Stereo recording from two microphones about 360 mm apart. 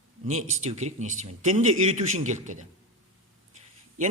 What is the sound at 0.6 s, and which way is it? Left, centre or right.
A man's voice, centre.